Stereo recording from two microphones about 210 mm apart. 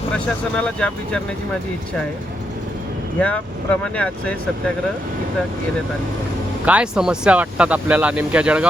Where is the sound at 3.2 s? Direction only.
5° left (ahead or behind).